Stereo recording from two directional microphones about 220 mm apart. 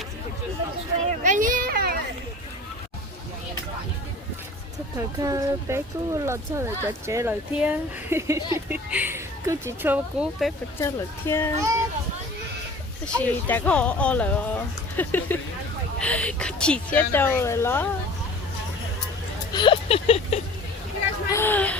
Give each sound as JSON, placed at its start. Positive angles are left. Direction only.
{"t": 1.2, "sound": "children playing", "side_deg": -35}
{"t": 4.9, "sound": "speech", "side_deg": -15}
{"t": 10.8, "sound": "a woman's voice", "side_deg": 10}
{"t": 13.1, "sound": "a woman's voice", "side_deg": 5}
{"t": 19.5, "sound": "a sound", "side_deg": 20}
{"t": 21.2, "sound": "a sound", "side_deg": 10}